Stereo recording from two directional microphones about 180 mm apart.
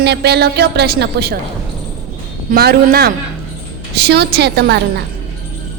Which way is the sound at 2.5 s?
60° right (ahead or behind).